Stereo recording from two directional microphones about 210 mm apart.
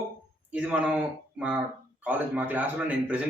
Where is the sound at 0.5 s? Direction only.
5° right (ahead or behind).